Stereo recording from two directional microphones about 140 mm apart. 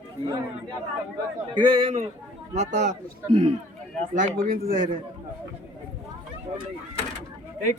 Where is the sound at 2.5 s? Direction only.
55° right (ahead or behind).